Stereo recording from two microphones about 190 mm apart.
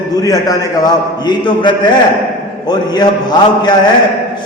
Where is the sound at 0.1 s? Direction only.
20° left (ahead or behind).